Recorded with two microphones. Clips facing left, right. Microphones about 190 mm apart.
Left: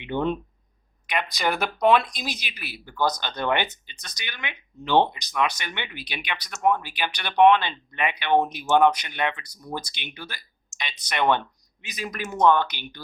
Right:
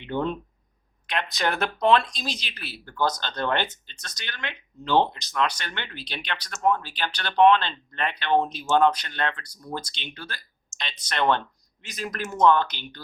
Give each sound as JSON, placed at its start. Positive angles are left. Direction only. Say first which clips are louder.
{"t": 0.0, "sound": "speech", "louder": "left 2 dB", "side_deg": 20}
{"t": 1.4, "sound": "speech", "louder": "left 1 dB", "side_deg": 5}